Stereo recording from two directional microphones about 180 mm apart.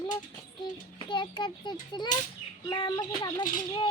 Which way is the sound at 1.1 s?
25° left (ahead or behind).